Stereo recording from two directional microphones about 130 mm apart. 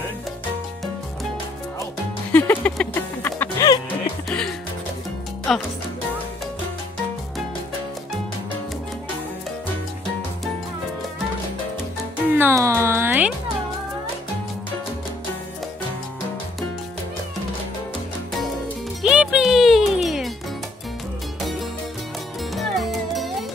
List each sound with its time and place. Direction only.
2.3 s music: 15° left (ahead or behind)
3.5 s music: 30° left (ahead or behind)
4.3 s music: 5° left (ahead or behind)
5.5 s speech: centre (ahead or behind)
12.3 s music: 15° right (ahead or behind)
19.0 s music: 5° right (ahead or behind)
21.4 s music: centre (ahead or behind)